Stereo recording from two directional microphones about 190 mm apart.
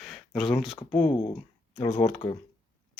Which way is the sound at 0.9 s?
30° left (ahead or behind).